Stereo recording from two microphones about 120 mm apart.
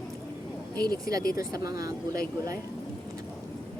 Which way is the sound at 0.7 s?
35° right (ahead or behind).